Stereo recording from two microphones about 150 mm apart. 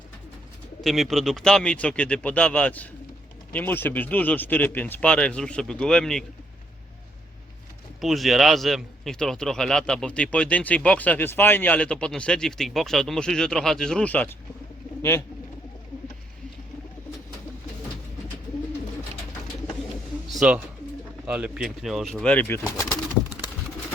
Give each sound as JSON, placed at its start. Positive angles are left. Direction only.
{"t": 0.9, "sound": "speech", "side_deg": 0}
{"t": 8.0, "sound": "a man's voice", "side_deg": 0}
{"t": 20.3, "sound": "pigeon", "side_deg": -5}
{"t": 21.2, "sound": "a man's voice", "side_deg": -10}